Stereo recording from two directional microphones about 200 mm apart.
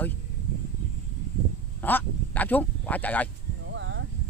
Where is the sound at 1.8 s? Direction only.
10° left (ahead or behind).